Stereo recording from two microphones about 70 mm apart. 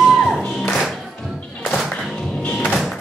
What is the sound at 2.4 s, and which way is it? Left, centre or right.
Music, centre.